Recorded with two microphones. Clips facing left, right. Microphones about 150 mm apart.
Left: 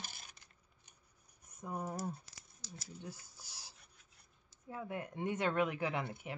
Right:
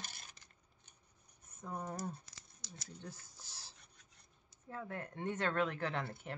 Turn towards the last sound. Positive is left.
turn(degrees=10)  # may be behind; listen again after turning